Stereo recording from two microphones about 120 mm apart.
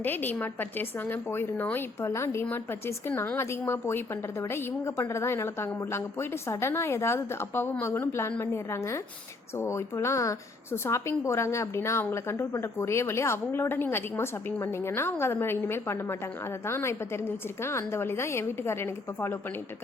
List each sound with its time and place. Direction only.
0.0 s a woman's voice: 15° left (ahead or behind)